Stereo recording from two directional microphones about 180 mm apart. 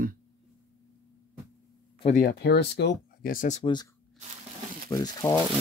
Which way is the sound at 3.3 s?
45° left (ahead or behind).